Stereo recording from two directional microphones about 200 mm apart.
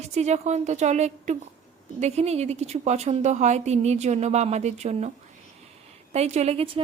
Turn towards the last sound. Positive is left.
turn(degrees=-30)  # may be behind; listen again after turning